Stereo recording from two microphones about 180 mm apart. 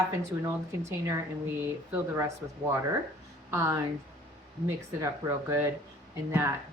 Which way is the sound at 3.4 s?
15° right (ahead or behind).